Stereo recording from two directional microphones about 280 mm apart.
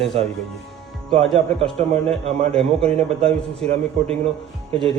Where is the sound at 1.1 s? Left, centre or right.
Right.